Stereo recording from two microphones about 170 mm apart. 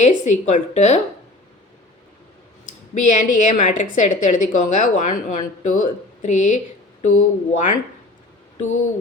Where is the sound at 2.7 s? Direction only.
45° left (ahead or behind).